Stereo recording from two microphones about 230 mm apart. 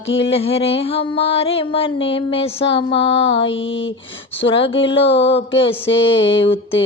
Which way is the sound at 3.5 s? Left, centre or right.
Left.